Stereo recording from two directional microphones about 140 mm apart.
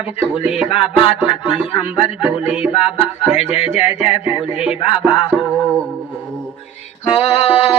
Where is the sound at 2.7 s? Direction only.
45° left (ahead or behind).